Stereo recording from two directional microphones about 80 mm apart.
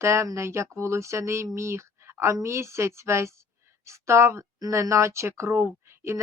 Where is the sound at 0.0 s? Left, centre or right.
Right.